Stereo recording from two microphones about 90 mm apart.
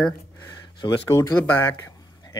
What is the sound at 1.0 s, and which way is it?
Speech, 35° left (ahead or behind).